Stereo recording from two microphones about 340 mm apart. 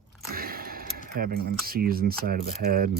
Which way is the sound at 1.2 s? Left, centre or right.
Right.